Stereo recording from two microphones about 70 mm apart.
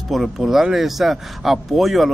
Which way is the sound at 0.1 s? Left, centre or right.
Centre.